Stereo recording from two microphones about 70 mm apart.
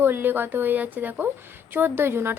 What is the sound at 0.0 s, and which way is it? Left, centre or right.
A woman's voice, right.